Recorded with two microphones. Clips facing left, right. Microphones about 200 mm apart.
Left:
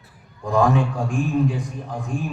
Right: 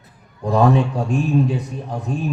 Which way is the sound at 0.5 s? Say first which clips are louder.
Right 3 dB; 35° right (ahead or behind).